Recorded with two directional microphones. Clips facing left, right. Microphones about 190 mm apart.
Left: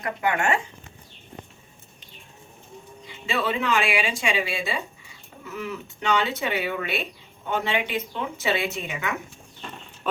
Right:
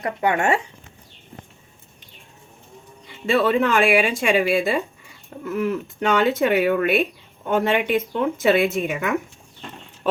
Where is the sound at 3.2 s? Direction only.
55° right (ahead or behind).